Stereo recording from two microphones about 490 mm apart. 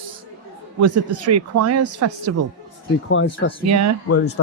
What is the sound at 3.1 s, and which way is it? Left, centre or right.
Speech, left.